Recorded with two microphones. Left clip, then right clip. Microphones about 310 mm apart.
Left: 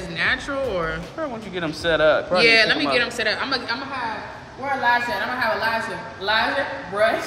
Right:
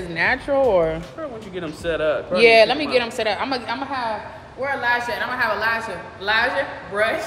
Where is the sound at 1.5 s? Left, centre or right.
Centre.